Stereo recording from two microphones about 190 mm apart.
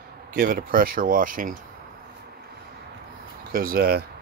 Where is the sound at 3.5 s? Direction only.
50° right (ahead or behind).